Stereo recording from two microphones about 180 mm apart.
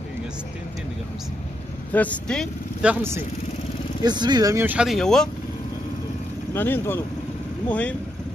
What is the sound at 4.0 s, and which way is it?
Speech, 25° right (ahead or behind).